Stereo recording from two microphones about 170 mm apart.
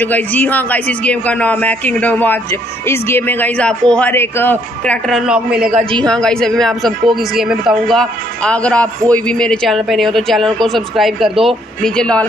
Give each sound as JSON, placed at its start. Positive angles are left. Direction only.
{"t": 0.0, "sound": "a man's voice", "side_deg": 10}
{"t": 5.8, "sound": "a man's voice", "side_deg": -30}
{"t": 6.0, "sound": "speech", "side_deg": 5}